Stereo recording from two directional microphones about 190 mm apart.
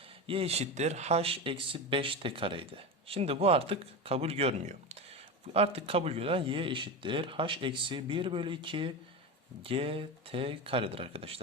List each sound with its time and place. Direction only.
0.3 s speech: 30° right (ahead or behind)